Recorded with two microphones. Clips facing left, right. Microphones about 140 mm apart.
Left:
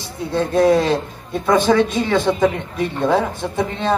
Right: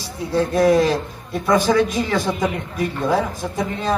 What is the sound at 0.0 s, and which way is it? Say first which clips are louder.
Speech: even; 20° left (ahead or behind).